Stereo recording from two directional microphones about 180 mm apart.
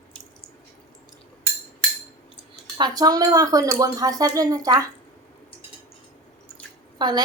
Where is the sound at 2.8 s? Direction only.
20° right (ahead or behind).